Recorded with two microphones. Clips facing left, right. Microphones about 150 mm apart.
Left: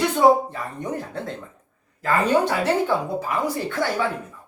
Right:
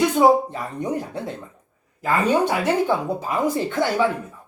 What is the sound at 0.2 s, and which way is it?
Speech, 20° right (ahead or behind).